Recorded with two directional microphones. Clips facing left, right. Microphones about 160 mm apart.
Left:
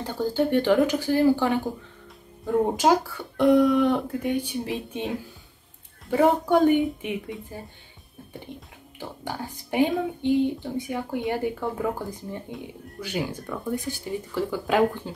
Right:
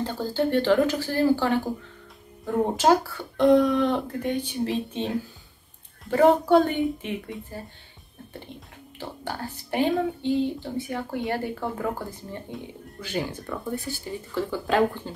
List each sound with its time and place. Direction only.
0.0 s speech: 10° left (ahead or behind)
12.5 s speech: centre (ahead or behind)
13.0 s speech: 10° left (ahead or behind)